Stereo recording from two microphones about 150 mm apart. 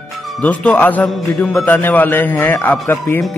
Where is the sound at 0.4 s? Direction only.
10° left (ahead or behind).